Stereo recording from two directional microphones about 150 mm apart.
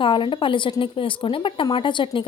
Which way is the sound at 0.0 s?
35° left (ahead or behind).